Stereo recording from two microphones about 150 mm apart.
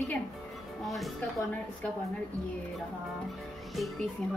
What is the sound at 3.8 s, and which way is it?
Speech, centre (ahead or behind).